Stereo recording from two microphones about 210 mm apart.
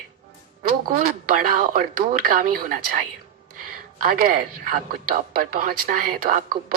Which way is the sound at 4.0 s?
45° right (ahead or behind).